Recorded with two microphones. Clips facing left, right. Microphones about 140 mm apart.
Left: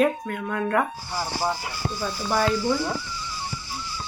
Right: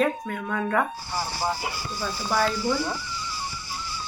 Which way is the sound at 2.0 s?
5° left (ahead or behind).